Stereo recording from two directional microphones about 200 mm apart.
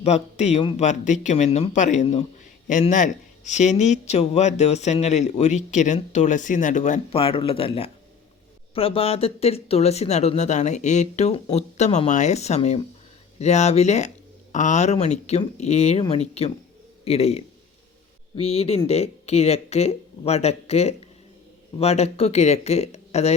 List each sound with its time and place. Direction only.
0.0 s speech: 35° left (ahead or behind)